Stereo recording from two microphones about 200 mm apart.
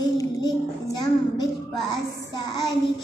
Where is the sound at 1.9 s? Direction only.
20° left (ahead or behind).